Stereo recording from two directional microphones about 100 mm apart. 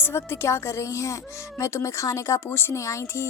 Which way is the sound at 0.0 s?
25° left (ahead or behind).